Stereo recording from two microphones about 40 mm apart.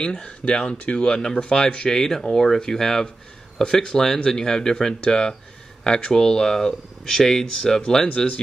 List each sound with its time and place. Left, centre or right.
0.2 s speech: left
1.3 s speech: left
1.9 s speech: centre